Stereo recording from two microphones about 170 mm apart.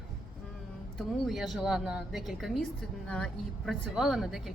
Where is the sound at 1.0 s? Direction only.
Centre (ahead or behind).